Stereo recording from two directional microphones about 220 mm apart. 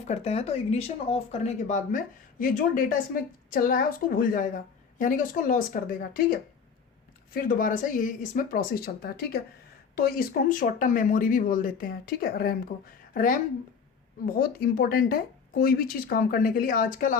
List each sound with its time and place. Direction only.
0.0 s speech: 30° left (ahead or behind)
14.3 s speech: 40° left (ahead or behind)